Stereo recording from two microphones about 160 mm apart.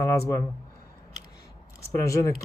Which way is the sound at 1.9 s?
20° left (ahead or behind).